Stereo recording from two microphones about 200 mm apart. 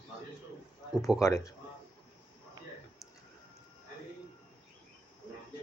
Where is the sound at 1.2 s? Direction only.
15° left (ahead or behind).